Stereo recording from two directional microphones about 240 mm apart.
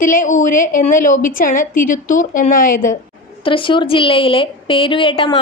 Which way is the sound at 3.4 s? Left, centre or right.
Left.